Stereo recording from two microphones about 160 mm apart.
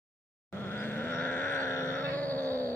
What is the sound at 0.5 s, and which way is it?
Grunt, 15° left (ahead or behind).